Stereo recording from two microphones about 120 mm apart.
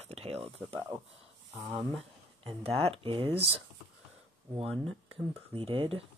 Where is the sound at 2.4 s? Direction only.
55° right (ahead or behind).